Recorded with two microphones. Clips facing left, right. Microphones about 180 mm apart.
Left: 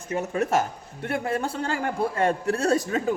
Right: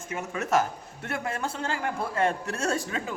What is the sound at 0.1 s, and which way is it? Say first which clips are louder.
A man's voice: left 3 dB; 30° left (ahead or behind).